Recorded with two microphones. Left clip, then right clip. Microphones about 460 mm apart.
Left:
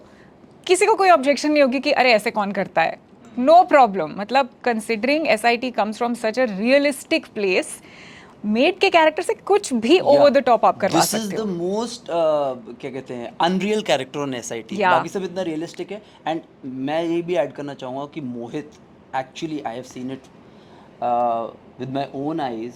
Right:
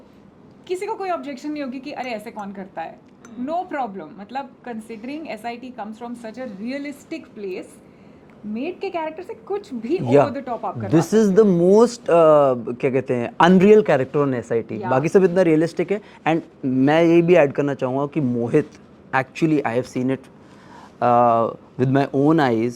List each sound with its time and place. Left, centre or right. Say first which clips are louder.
0.6 s a woman's voice: left 10 dB; left
10.9 s speech: right 2 dB; right
11.3 s speech: right 13 dB; right
15.0 s a man's voice: right 10 dB; right